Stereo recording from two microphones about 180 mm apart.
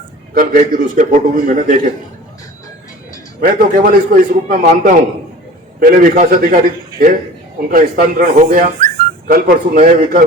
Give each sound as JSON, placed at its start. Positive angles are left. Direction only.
{"t": 0.3, "sound": "speech", "side_deg": -45}
{"t": 3.4, "sound": "speech", "side_deg": -50}
{"t": 7.7, "sound": "speech", "side_deg": -55}